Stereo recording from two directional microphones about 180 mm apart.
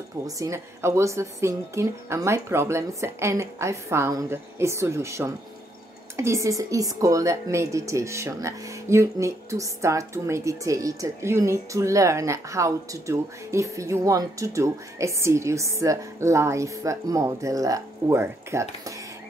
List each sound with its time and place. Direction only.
0.4 s a woman's voice: 15° right (ahead or behind)